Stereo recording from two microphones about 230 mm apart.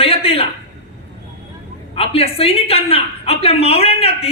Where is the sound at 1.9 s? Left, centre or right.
Left.